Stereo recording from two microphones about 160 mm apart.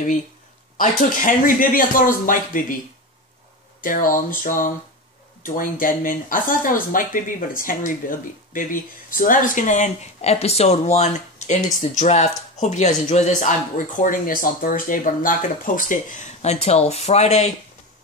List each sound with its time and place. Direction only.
0.7 s speech: 60° left (ahead or behind)
3.8 s speech: 60° left (ahead or behind); by 17.5 s 45° left (ahead or behind)